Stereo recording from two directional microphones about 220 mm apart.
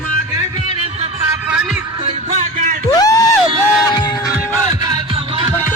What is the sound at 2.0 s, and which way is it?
Music, 30° right (ahead or behind).